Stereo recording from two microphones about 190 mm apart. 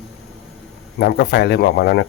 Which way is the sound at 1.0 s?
60° left (ahead or behind).